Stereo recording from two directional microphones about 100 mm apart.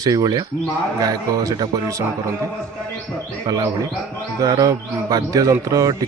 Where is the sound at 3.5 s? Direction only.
40° right (ahead or behind).